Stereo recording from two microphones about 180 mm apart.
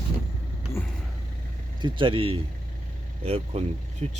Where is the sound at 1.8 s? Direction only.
30° right (ahead or behind).